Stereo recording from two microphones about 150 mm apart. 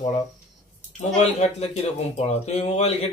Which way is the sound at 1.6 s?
50° left (ahead or behind).